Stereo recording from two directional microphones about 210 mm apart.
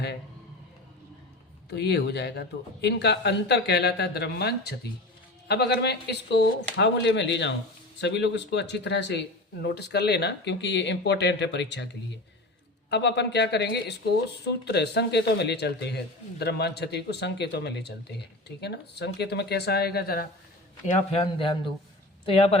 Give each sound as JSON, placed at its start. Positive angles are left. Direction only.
{"t": 1.7, "sound": "speech", "side_deg": 50}
{"t": 12.9, "sound": "speech", "side_deg": 55}
{"t": 20.8, "sound": "speech", "side_deg": 25}